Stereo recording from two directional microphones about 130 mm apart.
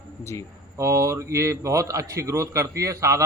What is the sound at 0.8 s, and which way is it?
A man's voice, 25° right (ahead or behind).